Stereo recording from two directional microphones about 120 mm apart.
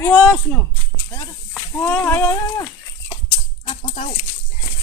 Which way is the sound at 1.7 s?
15° left (ahead or behind).